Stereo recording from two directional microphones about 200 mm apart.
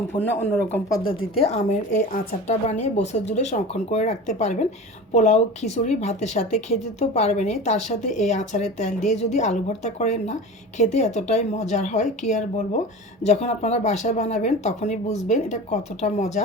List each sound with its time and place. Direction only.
0.1 s speech: 45° left (ahead or behind)
1.4 s speech: 35° left (ahead or behind)